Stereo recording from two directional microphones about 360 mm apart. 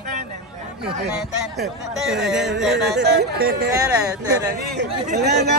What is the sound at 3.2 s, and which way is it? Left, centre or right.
Speech, right.